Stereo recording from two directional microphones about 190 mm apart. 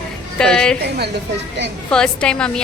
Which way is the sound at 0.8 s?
60° right (ahead or behind).